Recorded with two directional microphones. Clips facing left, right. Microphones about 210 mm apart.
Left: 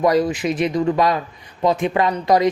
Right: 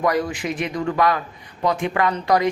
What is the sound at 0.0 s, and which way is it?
Speech, 20° left (ahead or behind).